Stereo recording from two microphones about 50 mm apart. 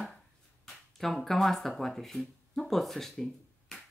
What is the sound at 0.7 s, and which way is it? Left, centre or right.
Speech, centre.